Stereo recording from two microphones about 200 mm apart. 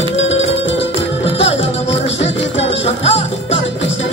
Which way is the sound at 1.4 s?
30° left (ahead or behind).